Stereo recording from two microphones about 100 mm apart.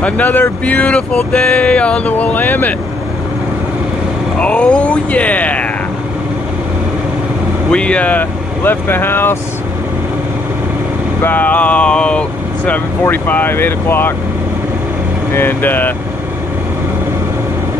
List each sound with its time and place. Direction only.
0.0 s speech: 20° left (ahead or behind)
4.4 s speech: 10° left (ahead or behind)
7.7 s speech: 10° left (ahead or behind)
11.2 s speech: 15° left (ahead or behind)
15.3 s speech: 20° left (ahead or behind)